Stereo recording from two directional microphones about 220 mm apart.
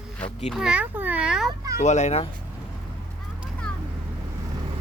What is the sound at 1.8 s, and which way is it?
Speech, 30° left (ahead or behind).